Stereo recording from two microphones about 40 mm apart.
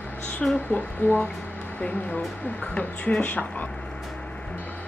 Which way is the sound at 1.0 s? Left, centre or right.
Left.